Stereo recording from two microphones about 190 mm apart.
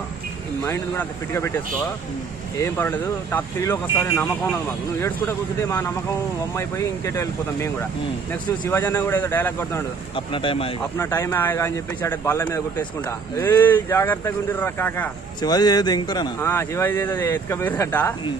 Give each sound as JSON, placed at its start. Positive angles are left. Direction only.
{"t": 0.7, "sound": "speech", "side_deg": 15}
{"t": 2.5, "sound": "speech", "side_deg": 10}
{"t": 10.1, "sound": "speech", "side_deg": 25}
{"t": 11.0, "sound": "speech", "side_deg": 15}
{"t": 15.4, "sound": "speech", "side_deg": 20}